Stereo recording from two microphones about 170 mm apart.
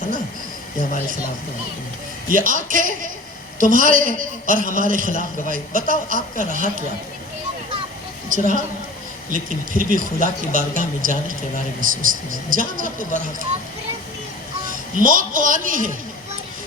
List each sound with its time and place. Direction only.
2.3 s a man's voice: 50° right (ahead or behind)
8.3 s a man's voice: 50° right (ahead or behind)
14.9 s a man's voice: 50° right (ahead or behind)